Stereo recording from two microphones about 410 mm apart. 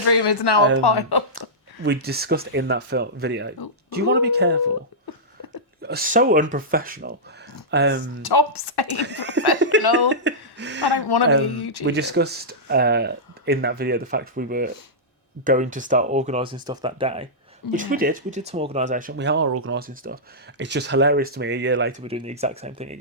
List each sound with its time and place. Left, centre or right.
0.0 s a woman's voice: left
1.4 s speech: right
5.8 s speech: right
8.2 s a woman's voice: left
9.0 s speech: right
9.7 s a sound: right
10.1 s speech: right
10.8 s a woman's voice: left
11.9 s speech: right
22.0 s speech: centre